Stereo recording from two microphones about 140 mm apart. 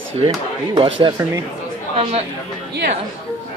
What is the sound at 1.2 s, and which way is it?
Speech, 20° right (ahead or behind).